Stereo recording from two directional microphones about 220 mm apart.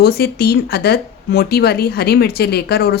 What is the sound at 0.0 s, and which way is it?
A woman's voice, 45° left (ahead or behind).